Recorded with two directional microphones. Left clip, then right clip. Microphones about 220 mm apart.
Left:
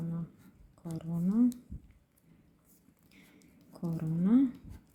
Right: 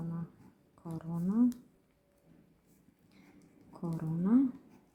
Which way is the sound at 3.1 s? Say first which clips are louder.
Left 2 dB; 15° left (ahead or behind).